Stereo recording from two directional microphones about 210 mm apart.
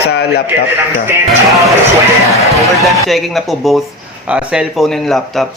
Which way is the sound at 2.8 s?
Centre (ahead or behind).